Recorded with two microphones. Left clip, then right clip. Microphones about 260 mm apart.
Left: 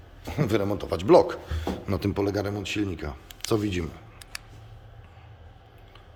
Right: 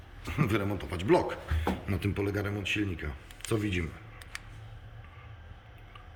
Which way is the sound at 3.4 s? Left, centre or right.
Left.